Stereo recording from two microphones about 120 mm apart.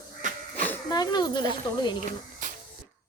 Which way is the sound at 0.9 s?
35° left (ahead or behind).